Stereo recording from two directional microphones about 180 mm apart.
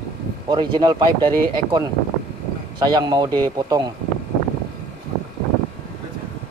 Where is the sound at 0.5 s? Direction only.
25° right (ahead or behind).